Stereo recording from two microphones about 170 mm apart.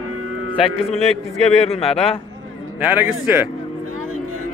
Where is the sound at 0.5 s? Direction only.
35° left (ahead or behind).